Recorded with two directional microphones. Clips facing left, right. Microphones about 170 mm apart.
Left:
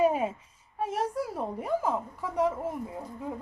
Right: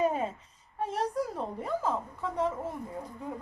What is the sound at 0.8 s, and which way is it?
Speech, 10° left (ahead or behind).